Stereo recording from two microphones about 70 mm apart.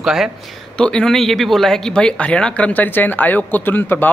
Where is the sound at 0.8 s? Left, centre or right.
Centre.